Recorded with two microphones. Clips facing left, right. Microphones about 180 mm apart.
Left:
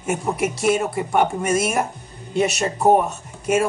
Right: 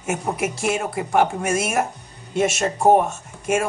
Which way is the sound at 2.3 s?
Centre (ahead or behind).